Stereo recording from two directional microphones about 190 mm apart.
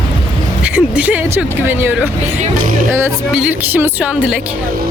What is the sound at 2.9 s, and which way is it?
A woman's voice, 10° right (ahead or behind).